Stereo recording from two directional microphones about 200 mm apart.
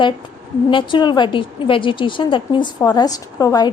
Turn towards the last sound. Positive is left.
turn(degrees=15)  # may be behind; listen again after turning